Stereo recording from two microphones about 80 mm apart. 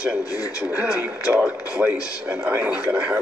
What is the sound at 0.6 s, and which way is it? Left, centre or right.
Speech, centre.